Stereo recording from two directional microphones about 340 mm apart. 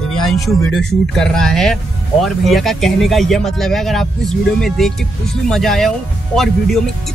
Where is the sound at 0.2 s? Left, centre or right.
Centre.